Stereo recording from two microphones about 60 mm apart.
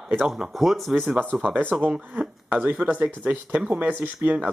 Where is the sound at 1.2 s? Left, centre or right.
Right.